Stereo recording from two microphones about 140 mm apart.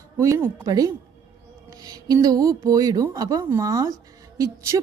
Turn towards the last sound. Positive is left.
turn(degrees=-25)  # may be behind; listen again after turning